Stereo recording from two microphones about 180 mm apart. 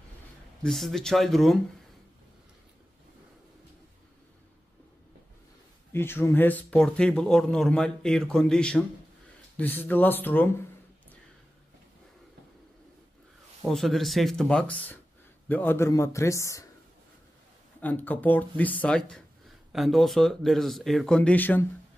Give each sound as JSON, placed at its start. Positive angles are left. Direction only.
{"t": 0.7, "sound": "speech", "side_deg": 0}
{"t": 5.9, "sound": "a man's voice", "side_deg": 15}
{"t": 13.7, "sound": "a man's voice", "side_deg": 0}
{"t": 17.7, "sound": "speech", "side_deg": 10}